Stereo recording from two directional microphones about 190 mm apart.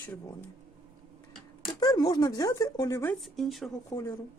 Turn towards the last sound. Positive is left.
turn(degrees=15)  # may be behind; listen again after turning